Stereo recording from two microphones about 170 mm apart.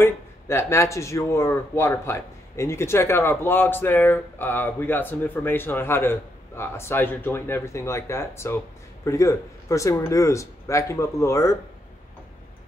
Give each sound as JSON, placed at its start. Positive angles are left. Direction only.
{"t": 0.0, "sound": "speech", "side_deg": 15}